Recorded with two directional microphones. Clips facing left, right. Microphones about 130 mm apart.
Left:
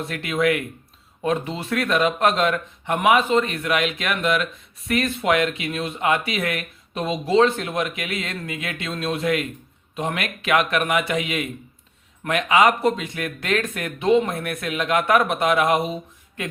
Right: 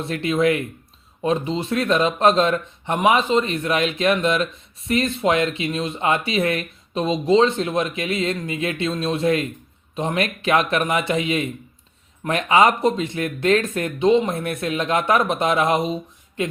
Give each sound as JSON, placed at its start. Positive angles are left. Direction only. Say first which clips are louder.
{"t": 0.0, "sound": "speech", "louder": "right 3 dB", "side_deg": -30}